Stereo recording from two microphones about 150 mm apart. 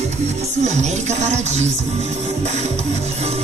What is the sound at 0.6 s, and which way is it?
Speech, 50° right (ahead or behind).